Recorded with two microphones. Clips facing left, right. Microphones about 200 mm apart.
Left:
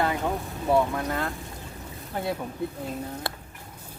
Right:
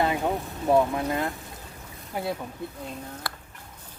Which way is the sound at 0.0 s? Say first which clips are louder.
Right 1 dB; 20° right (ahead or behind).